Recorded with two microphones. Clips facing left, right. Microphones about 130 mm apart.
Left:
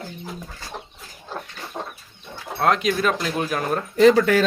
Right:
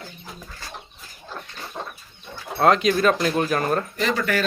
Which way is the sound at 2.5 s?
5° left (ahead or behind).